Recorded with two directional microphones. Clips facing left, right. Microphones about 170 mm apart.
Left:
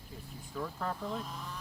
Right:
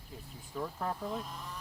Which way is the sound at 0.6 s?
15° right (ahead or behind).